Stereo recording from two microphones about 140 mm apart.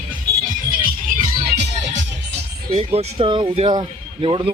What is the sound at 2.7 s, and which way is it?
Speech, 45° right (ahead or behind).